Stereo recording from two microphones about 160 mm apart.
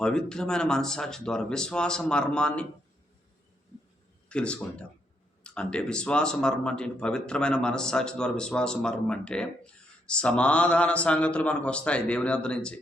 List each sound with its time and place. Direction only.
0.0 s speech: 5° left (ahead or behind)
4.3 s a man's voice: 5° left (ahead or behind)